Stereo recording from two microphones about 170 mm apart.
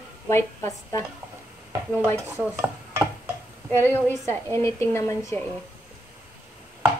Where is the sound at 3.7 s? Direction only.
15° left (ahead or behind).